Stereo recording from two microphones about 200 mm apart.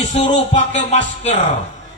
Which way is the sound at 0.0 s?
30° left (ahead or behind).